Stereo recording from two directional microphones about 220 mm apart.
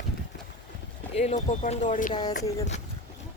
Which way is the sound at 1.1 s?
30° left (ahead or behind).